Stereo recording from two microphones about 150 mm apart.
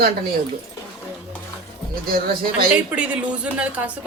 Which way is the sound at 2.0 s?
85° right.